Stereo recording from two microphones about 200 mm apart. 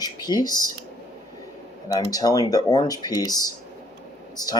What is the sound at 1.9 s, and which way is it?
Speech, 20° left (ahead or behind).